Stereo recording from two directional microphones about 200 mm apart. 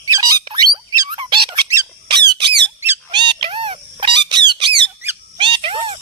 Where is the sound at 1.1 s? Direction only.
25° right (ahead or behind).